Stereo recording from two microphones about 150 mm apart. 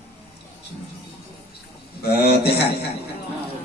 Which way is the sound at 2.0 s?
90° left.